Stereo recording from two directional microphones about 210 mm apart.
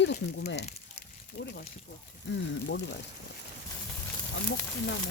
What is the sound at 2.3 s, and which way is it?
Speech, 55° left (ahead or behind).